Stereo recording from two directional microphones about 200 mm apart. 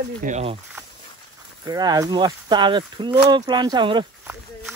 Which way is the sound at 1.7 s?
20° right (ahead or behind).